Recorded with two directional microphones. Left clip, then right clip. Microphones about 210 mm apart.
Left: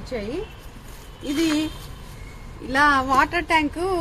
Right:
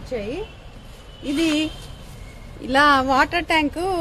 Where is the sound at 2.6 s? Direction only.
55° right (ahead or behind).